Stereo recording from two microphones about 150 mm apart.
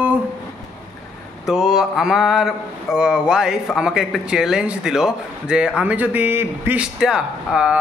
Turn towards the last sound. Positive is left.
turn(degrees=-5)  # may be behind; listen again after turning